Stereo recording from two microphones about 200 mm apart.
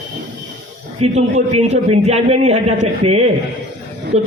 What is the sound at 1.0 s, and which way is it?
A man's voice, 35° right (ahead or behind).